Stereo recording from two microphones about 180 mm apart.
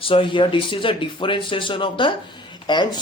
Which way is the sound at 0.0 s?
30° left (ahead or behind).